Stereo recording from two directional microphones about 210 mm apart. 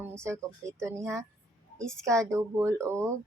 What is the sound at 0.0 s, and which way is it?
Speech, 15° right (ahead or behind).